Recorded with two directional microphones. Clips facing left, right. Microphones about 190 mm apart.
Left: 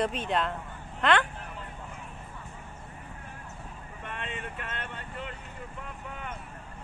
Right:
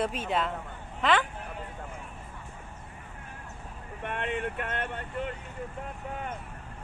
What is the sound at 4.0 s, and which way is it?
Vehicle, 60° right (ahead or behind).